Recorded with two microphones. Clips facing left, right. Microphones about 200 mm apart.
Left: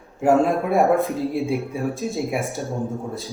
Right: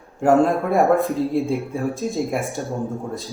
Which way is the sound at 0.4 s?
Centre (ahead or behind).